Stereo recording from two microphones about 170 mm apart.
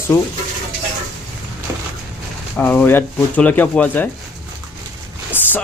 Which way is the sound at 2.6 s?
10° left (ahead or behind).